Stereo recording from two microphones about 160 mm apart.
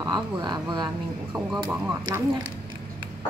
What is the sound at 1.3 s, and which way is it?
Speech, 10° right (ahead or behind).